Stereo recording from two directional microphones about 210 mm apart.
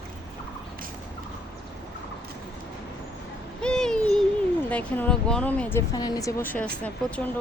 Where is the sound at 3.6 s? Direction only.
5° left (ahead or behind).